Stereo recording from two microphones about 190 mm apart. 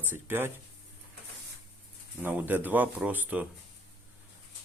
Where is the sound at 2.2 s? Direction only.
10° right (ahead or behind).